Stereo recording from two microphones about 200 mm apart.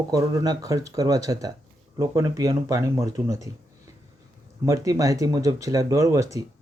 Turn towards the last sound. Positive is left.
turn(degrees=-15)  # may be behind; listen again after turning